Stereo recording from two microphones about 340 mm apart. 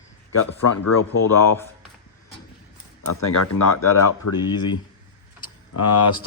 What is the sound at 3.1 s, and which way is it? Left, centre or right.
Speech, left.